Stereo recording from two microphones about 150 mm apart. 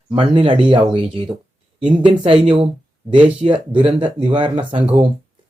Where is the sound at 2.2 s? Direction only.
40° right (ahead or behind).